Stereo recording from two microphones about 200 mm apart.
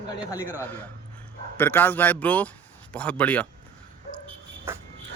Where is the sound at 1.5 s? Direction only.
10° left (ahead or behind).